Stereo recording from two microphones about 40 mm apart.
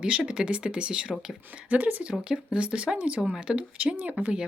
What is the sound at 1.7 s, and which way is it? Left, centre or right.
Speech, right.